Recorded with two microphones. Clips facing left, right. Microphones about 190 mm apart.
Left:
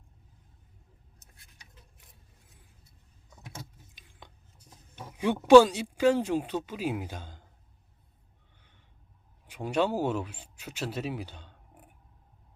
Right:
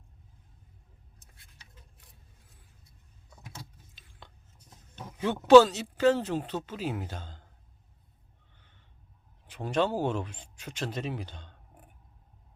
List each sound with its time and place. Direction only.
4.0 s scissors: 15° left (ahead or behind)
4.9 s speech: 10° left (ahead or behind)
9.5 s speech: 10° left (ahead or behind)